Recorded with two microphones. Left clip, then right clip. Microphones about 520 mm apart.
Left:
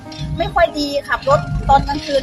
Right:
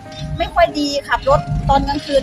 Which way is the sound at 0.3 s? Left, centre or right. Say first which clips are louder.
Even; left.